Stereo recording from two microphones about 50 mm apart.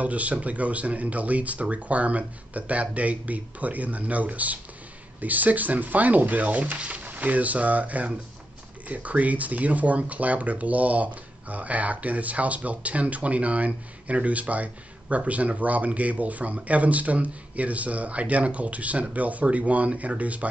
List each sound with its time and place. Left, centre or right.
0.0 s speech: right